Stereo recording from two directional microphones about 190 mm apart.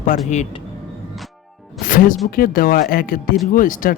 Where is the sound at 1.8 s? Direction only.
45° left (ahead or behind).